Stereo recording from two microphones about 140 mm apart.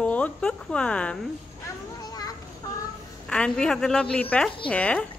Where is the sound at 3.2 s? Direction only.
5° left (ahead or behind).